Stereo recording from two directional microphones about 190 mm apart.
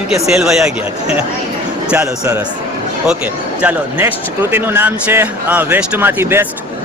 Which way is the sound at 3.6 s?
10° right (ahead or behind).